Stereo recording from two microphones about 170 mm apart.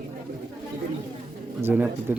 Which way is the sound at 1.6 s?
10° right (ahead or behind).